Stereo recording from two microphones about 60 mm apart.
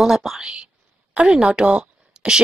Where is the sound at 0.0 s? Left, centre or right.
Centre.